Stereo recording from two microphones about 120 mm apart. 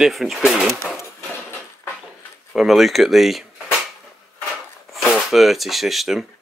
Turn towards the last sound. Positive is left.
turn(degrees=0)  # may be behind; listen again after turning